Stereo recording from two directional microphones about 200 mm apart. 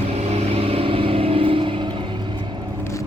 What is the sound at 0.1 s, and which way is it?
Vehicle, 30° right (ahead or behind).